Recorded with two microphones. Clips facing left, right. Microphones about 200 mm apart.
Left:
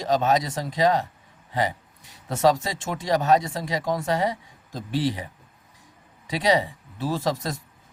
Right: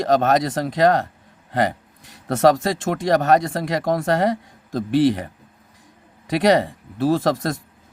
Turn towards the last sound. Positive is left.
turn(degrees=-65)  # may be behind; listen again after turning